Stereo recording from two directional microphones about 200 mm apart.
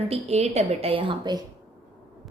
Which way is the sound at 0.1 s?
35° right (ahead or behind).